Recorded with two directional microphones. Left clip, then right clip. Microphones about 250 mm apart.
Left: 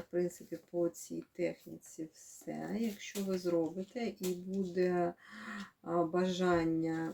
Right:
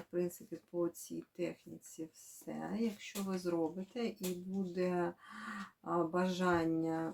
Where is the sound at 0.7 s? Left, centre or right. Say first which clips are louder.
Left 3 dB; centre.